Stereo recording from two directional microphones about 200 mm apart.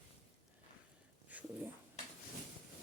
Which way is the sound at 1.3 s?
5° right (ahead or behind).